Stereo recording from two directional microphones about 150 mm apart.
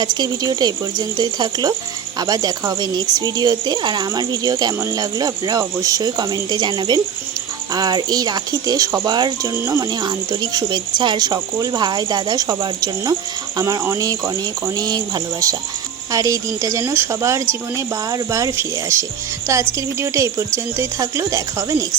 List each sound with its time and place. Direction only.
0.0 s speech: 30° right (ahead or behind)